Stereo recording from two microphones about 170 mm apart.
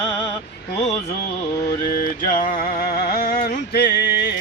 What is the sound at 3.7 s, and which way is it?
Music, 75° left (ahead or behind).